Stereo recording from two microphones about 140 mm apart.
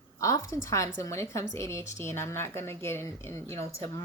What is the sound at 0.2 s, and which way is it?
Speech, 25° left (ahead or behind).